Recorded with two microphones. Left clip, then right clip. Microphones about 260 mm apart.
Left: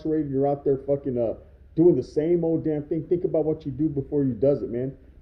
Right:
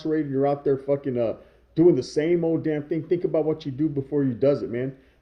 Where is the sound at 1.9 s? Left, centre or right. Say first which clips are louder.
Right 1 dB; right.